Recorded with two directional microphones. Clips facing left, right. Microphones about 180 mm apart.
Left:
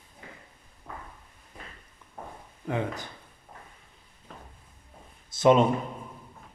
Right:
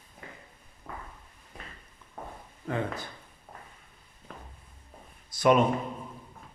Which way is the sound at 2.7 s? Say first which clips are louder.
Left 1 dB; 15° left (ahead or behind).